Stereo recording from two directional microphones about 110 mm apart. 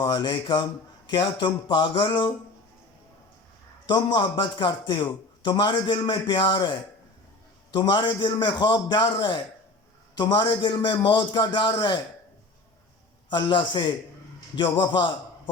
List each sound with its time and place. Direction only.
0.0 s a man's voice: 40° left (ahead or behind)
3.8 s a man's voice: 40° left (ahead or behind)
7.7 s a man's voice: 40° left (ahead or behind)
13.3 s a man's voice: 45° left (ahead or behind)